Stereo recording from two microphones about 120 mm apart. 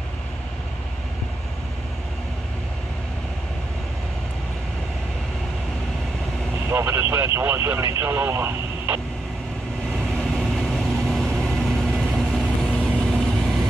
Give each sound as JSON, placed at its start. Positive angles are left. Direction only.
{"t": 6.7, "sound": "vehicle", "side_deg": -20}
{"t": 8.0, "sound": "speech", "side_deg": -20}
{"t": 9.9, "sound": "vehicle", "side_deg": 5}